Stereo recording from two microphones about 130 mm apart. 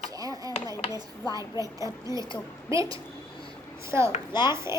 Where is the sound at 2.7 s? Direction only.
25° right (ahead or behind).